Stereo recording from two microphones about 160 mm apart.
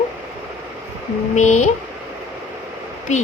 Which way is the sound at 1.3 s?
50° left (ahead or behind).